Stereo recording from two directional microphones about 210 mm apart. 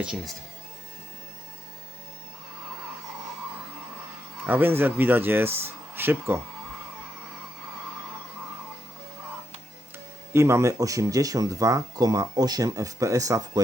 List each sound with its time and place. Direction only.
0.0 s speech: 5° right (ahead or behind)
4.4 s speech: 10° right (ahead or behind)
10.3 s speech: 15° right (ahead or behind)